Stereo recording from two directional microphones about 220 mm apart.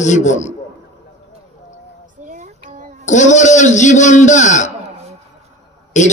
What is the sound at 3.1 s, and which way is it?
A man's voice, 35° left (ahead or behind).